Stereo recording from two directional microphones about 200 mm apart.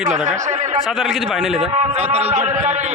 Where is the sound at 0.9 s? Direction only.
Centre (ahead or behind).